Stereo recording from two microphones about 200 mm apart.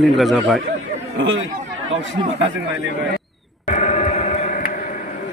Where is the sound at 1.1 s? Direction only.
75° right (ahead or behind).